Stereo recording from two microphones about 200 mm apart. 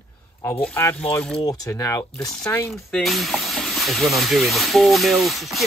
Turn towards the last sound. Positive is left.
turn(degrees=0)  # may be behind; listen again after turning